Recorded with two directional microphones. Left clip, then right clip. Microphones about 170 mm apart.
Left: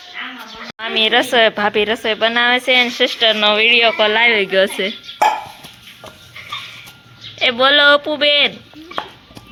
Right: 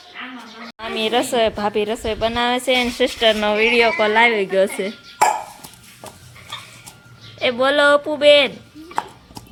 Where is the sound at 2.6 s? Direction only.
25° right (ahead or behind).